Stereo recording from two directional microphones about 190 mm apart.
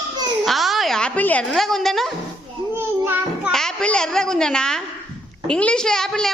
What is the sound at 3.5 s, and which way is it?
A woman's voice, 5° left (ahead or behind).